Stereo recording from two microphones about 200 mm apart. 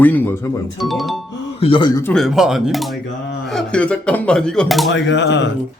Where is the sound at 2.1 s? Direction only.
Centre (ahead or behind).